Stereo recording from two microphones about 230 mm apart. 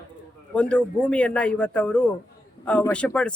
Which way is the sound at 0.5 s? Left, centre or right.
Centre.